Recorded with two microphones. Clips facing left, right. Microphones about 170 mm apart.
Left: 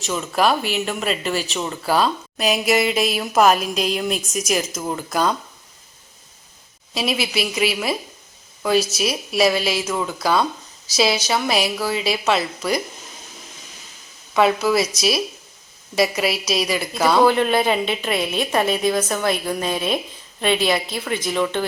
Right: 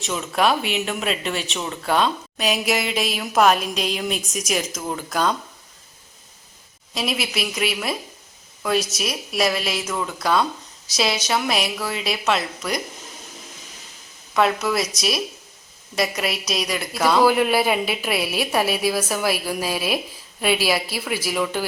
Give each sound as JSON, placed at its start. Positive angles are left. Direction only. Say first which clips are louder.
{"t": 0.0, "sound": "speech", "louder": "left 1 dB", "side_deg": 0}
{"t": 6.9, "sound": "speech", "louder": "left 3 dB", "side_deg": 0}
{"t": 14.3, "sound": "speech", "louder": "left 3 dB", "side_deg": 0}